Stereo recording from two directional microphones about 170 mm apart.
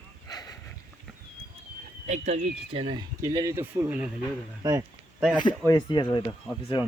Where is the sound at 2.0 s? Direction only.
45° right (ahead or behind); by 4.1 s 10° right (ahead or behind).